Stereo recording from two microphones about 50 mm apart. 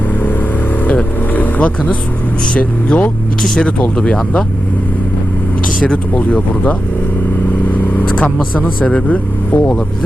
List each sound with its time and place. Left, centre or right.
0.9 s vehicle: left
2.5 s speech: left
6.1 s speech: left
7.9 s speech: left